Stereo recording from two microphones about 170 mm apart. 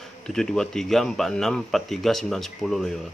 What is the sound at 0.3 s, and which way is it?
Speech, 5° left (ahead or behind).